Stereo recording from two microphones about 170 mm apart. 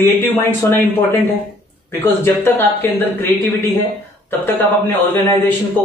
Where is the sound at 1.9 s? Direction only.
15° left (ahead or behind).